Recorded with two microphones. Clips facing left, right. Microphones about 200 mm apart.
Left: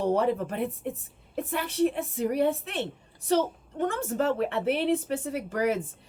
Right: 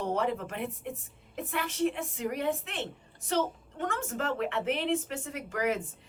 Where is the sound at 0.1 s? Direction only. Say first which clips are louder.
Left 5 dB; 35° left (ahead or behind).